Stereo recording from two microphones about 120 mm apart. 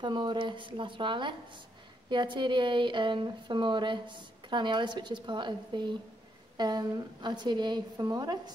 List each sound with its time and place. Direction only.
0.0 s speech: 40° right (ahead or behind)